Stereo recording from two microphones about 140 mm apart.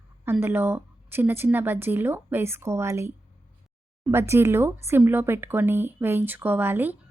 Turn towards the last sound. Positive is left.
turn(degrees=-15)  # may be behind; listen again after turning